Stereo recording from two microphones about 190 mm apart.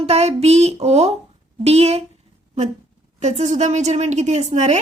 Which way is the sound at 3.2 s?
35° right (ahead or behind).